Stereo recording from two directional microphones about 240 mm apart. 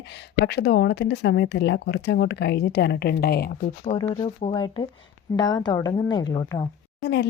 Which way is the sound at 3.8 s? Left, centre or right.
Left.